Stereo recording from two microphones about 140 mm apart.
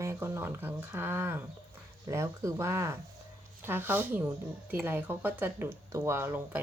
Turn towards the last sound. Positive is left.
turn(degrees=-15)  # may be behind; listen again after turning